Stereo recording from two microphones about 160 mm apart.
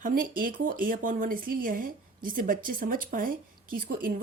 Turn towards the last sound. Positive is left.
turn(degrees=-60)  # may be behind; listen again after turning